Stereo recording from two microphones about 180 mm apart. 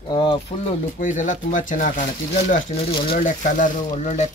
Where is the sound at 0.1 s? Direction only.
25° left (ahead or behind).